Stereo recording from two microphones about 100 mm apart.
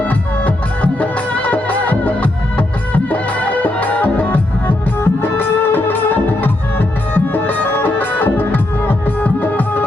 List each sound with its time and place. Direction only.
0.0 s music: 15° left (ahead or behind)